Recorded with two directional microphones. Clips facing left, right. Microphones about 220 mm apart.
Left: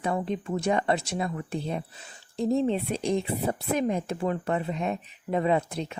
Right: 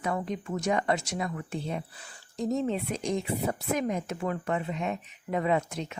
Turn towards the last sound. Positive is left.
turn(degrees=30)  # may be behind; listen again after turning